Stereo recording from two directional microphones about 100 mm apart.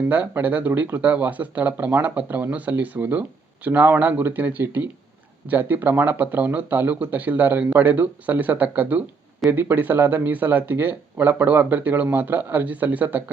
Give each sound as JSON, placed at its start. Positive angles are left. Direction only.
{"t": 0.1, "sound": "speech", "side_deg": -15}